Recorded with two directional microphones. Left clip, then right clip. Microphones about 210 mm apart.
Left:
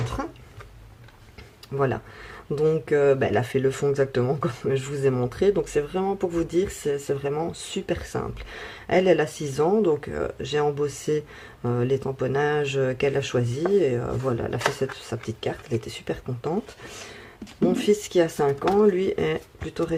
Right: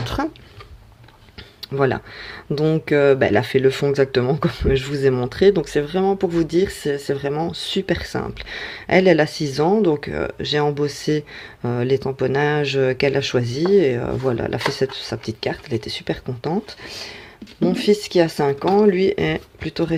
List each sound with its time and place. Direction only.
1.7 s speech: 25° right (ahead or behind)
17.7 s speech: 15° right (ahead or behind)